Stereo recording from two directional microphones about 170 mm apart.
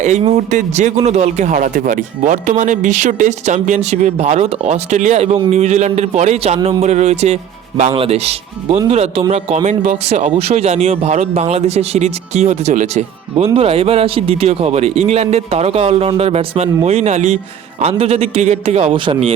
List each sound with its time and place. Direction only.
0.0 s a man's voice: 40° right (ahead or behind)